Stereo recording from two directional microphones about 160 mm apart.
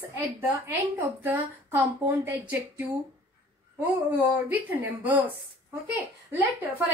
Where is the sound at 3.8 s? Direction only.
10° right (ahead or behind).